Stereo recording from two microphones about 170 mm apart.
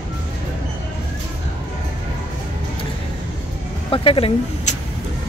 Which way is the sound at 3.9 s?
35° left (ahead or behind).